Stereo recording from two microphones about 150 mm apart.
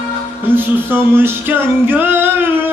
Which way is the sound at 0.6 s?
15° right (ahead or behind).